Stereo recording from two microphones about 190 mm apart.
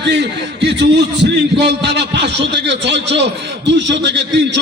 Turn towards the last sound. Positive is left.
turn(degrees=-65)  # may be behind; listen again after turning